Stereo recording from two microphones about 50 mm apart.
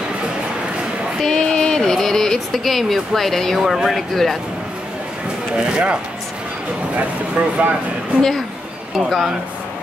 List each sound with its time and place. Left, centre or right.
1.2 s a sound: centre
3.6 s speech: centre
4.1 s speech: centre
5.6 s speech: centre
7.3 s speech: right
8.9 s speech: centre